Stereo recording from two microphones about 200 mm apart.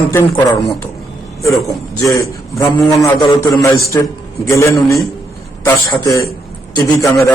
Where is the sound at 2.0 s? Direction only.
15° left (ahead or behind).